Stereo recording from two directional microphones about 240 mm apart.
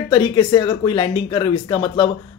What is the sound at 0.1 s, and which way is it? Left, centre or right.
Speech, centre.